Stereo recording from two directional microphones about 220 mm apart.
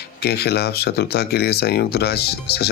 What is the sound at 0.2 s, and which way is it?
Speech, 45° left (ahead or behind).